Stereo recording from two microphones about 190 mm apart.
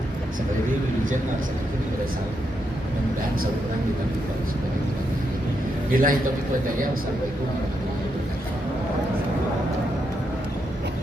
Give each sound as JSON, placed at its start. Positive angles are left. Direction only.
{"t": 5.9, "sound": "a man's voice", "side_deg": -50}